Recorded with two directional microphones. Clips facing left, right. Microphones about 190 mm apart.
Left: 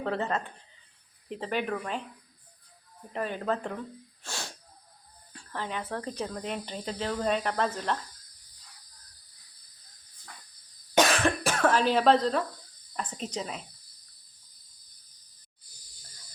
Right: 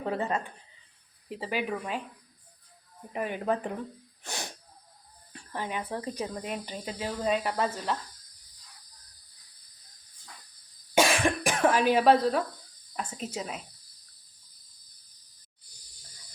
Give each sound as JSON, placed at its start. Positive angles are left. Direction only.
{"t": 0.0, "sound": "speech", "side_deg": -10}
{"t": 3.1, "sound": "speech", "side_deg": -15}
{"t": 4.2, "sound": "wheeze", "side_deg": -20}
{"t": 5.3, "sound": "speech", "side_deg": -15}
{"t": 10.9, "sound": "cough", "side_deg": -10}
{"t": 13.0, "sound": "speech", "side_deg": -5}